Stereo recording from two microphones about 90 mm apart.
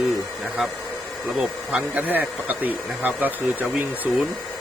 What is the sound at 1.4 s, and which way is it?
Speech, 15° right (ahead or behind).